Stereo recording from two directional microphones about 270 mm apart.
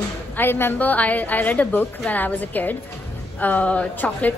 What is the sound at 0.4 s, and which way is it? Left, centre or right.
A woman's voice, centre.